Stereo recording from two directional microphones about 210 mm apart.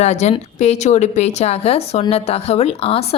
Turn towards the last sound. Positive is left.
turn(degrees=30)  # may be behind; listen again after turning